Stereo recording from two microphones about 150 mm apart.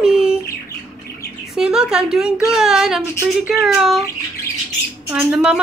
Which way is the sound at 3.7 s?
Centre (ahead or behind).